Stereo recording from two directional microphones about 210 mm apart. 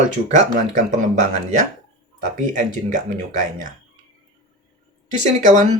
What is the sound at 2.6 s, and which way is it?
Speech, 40° right (ahead or behind).